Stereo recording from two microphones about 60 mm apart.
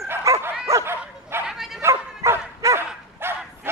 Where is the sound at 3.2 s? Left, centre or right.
Right.